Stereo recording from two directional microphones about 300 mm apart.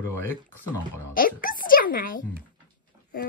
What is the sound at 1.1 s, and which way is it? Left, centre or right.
A child's voice, left.